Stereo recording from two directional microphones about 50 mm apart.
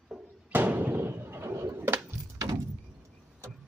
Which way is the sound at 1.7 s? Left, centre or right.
Right.